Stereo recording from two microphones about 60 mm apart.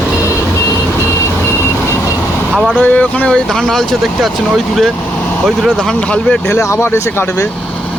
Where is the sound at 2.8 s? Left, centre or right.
Left.